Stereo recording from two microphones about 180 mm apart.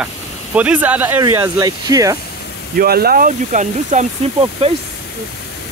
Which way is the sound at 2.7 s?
60° right (ahead or behind).